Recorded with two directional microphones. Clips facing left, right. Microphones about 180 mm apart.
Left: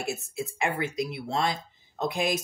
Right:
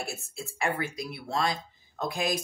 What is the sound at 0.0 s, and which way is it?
Speech, 20° left (ahead or behind).